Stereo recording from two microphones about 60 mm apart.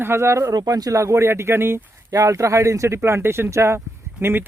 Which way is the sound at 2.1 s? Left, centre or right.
Right.